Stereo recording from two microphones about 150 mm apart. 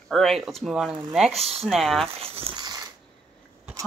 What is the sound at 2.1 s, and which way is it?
Crumpling, 40° right (ahead or behind).